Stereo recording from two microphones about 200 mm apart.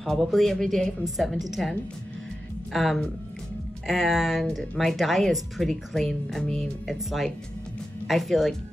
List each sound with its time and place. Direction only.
0.0 s speech: centre (ahead or behind)